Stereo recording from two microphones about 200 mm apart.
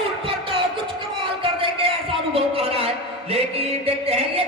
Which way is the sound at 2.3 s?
30° right (ahead or behind).